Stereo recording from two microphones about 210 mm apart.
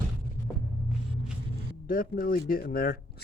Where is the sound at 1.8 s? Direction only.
40° left (ahead or behind).